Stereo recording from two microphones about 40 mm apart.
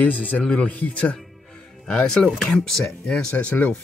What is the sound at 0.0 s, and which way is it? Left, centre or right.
A man's voice, left.